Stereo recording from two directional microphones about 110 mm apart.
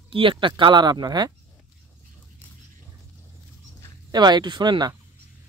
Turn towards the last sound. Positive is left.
turn(degrees=-40)  # may be behind; listen again after turning